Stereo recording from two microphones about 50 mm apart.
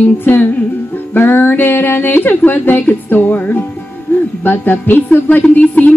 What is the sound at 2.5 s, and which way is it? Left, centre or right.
Speech, left.